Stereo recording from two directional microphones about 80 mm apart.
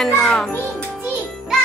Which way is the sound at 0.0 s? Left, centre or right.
Centre.